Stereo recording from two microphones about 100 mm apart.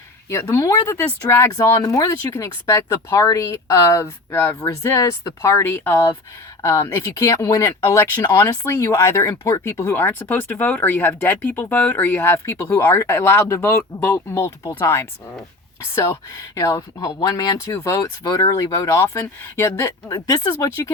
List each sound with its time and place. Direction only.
0.3 s speech: 25° left (ahead or behind)
20.1 s speech: 40° left (ahead or behind)